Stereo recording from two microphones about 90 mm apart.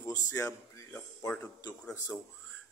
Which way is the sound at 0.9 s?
15° left (ahead or behind).